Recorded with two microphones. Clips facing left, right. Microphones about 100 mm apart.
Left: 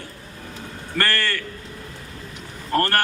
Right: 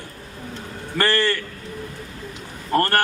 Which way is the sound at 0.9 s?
20° right (ahead or behind).